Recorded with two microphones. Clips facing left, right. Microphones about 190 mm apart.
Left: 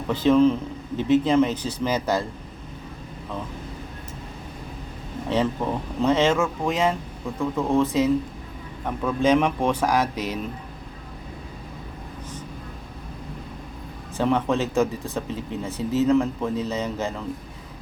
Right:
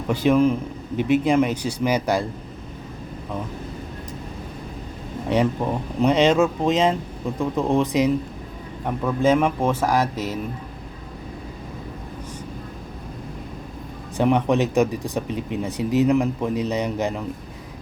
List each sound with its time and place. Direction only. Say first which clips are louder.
0.1 s speech: even; 10° right (ahead or behind)
5.3 s speech: right 2 dB; 15° right (ahead or behind)
14.2 s speech: right 3 dB; 15° right (ahead or behind)